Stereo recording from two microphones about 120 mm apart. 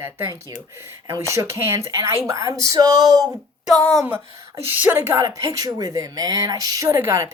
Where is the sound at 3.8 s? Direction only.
5° left (ahead or behind).